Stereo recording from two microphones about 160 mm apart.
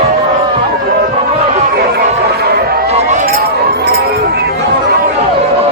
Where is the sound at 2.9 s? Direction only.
45° right (ahead or behind).